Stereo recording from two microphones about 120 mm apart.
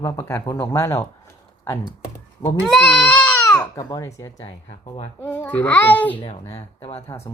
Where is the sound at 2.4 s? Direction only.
35° left (ahead or behind).